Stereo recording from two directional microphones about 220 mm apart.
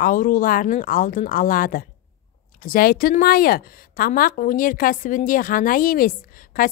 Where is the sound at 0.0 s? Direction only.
40° left (ahead or behind).